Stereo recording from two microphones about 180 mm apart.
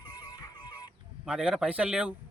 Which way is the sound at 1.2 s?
5° right (ahead or behind).